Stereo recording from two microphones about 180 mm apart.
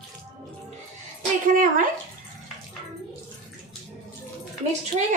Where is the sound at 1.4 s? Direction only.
45° right (ahead or behind).